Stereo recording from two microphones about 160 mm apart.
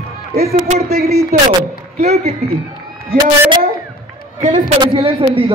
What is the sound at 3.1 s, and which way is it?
A woman's voice, 30° right (ahead or behind).